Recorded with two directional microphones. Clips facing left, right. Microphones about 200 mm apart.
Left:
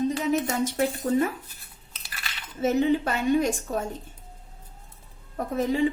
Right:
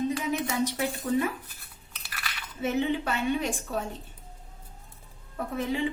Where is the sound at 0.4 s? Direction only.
45° left (ahead or behind).